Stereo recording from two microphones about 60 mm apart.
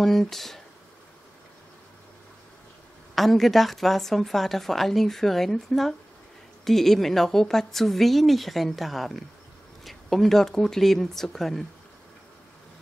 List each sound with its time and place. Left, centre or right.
0.0 s speech: centre
3.2 s speech: centre